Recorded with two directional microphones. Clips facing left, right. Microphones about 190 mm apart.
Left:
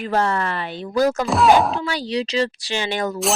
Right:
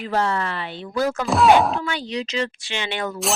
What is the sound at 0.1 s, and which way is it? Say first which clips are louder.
Speech: left 2 dB; 50° left (ahead or behind).